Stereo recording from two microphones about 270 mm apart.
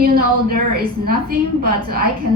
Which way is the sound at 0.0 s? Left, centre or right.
Right.